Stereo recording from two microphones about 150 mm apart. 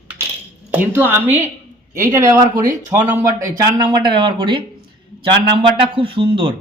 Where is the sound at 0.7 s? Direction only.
15° right (ahead or behind).